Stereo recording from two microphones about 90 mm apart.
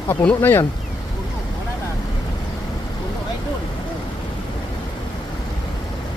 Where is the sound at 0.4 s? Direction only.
25° left (ahead or behind).